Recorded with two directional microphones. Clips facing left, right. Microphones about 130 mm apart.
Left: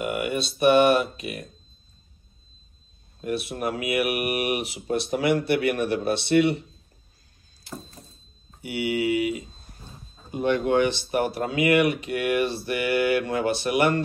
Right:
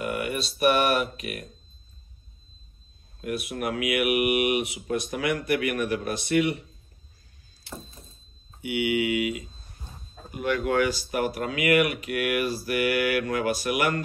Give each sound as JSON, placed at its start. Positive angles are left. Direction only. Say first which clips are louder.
{"t": 0.0, "sound": "speech", "louder": "left 2 dB", "side_deg": 25}
{"t": 3.2, "sound": "speech", "louder": "left 2 dB", "side_deg": 30}
{"t": 8.6, "sound": "speech", "louder": "even", "side_deg": 35}